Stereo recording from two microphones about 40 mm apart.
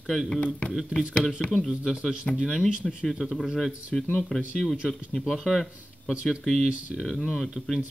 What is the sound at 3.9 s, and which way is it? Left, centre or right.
Speech, centre.